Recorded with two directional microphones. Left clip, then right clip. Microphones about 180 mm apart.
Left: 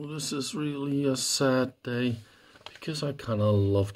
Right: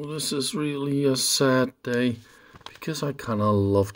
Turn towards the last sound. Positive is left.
turn(degrees=-25)  # may be behind; listen again after turning